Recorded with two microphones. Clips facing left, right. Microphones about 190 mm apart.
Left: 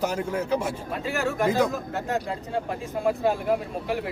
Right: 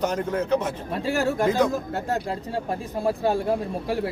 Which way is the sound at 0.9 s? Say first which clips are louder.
Right 5 dB; 35° right (ahead or behind).